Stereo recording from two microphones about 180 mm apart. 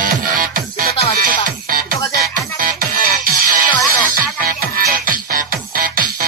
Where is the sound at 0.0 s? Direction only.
50° right (ahead or behind).